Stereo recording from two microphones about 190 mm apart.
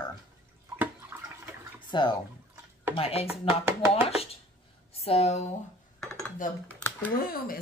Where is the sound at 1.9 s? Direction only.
25° left (ahead or behind).